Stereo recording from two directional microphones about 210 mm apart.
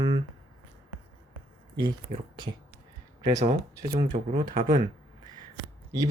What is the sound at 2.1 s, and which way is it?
Speech, 35° right (ahead or behind).